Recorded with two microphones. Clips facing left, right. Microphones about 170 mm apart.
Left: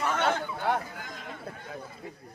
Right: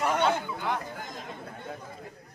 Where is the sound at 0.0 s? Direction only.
15° right (ahead or behind).